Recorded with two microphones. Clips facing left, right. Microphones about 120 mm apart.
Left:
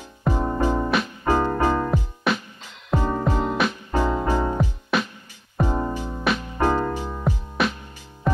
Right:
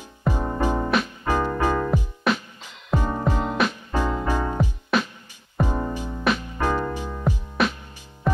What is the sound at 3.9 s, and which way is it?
Music, 20° left (ahead or behind).